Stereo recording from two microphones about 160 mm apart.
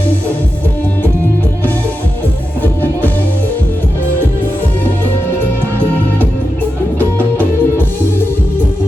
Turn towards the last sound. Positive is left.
turn(degrees=10)  # may be behind; listen again after turning